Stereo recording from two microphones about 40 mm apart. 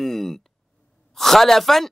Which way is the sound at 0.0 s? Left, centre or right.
Centre.